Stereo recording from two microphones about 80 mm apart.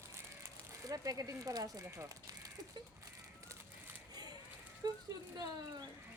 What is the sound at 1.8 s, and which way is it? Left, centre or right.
Speech, right.